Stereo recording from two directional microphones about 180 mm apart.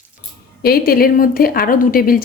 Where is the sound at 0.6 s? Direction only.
55° left (ahead or behind).